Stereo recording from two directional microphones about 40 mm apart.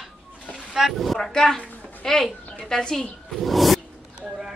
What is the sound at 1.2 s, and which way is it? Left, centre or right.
A woman's voice, centre.